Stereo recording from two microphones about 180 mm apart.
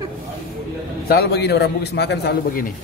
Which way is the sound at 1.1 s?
65° left (ahead or behind).